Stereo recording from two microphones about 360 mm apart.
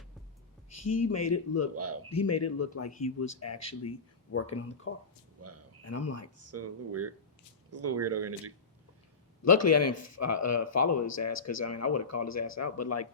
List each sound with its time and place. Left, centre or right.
0.8 s speech: left
1.7 s speech: right
2.1 s speech: left
5.4 s a sound: right
5.8 s speech: left
6.3 s speech: right
9.4 s speech: left